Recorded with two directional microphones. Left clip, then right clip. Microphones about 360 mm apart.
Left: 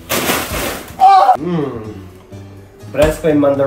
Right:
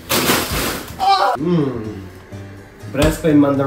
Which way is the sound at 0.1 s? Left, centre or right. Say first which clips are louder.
Even; centre.